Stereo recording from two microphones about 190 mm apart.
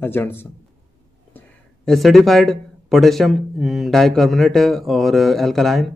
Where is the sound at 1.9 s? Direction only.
Centre (ahead or behind).